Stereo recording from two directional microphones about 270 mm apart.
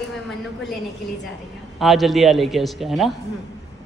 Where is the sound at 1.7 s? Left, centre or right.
Centre.